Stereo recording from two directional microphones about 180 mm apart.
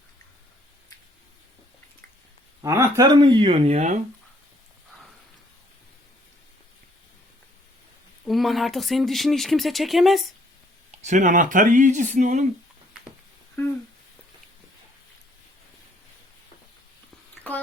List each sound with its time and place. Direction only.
2.6 s speech: 15° right (ahead or behind)
3.1 s speech: 25° right (ahead or behind)
3.7 s speech: 40° right (ahead or behind)
8.2 s speech: centre (ahead or behind)
11.0 s speech: 45° right (ahead or behind)
13.6 s speech: 15° left (ahead or behind)